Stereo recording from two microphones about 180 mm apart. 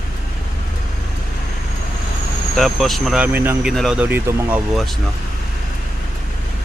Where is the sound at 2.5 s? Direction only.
Centre (ahead or behind).